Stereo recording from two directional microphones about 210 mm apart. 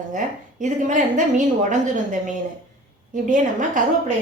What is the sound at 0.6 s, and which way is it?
A woman's voice, 35° right (ahead or behind).